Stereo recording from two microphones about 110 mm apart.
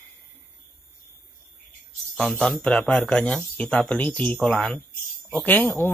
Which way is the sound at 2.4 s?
5° left (ahead or behind).